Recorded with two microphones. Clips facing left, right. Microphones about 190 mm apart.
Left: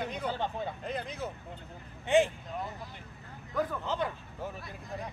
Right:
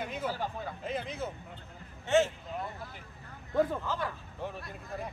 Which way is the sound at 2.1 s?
15° left (ahead or behind).